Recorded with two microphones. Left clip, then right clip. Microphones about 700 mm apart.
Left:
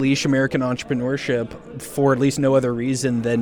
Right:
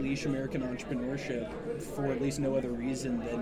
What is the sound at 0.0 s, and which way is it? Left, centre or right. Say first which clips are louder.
Speech: left 14 dB; left.